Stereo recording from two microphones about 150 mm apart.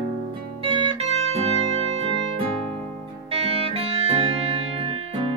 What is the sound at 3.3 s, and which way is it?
Music, 45° right (ahead or behind).